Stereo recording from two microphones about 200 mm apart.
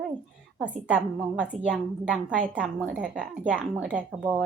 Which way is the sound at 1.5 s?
Centre (ahead or behind).